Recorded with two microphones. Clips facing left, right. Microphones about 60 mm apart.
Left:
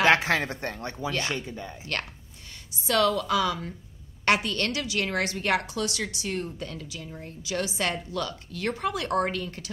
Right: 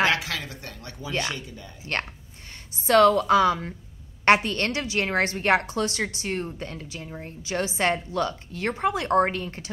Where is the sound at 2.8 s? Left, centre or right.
Right.